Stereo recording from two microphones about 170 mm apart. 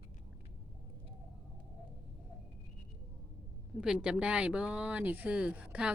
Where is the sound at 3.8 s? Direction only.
5° right (ahead or behind).